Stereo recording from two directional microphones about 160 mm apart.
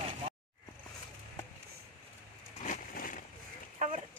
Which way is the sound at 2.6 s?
55° left (ahead or behind).